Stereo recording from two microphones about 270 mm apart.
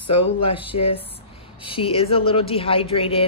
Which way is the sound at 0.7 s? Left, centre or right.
Left.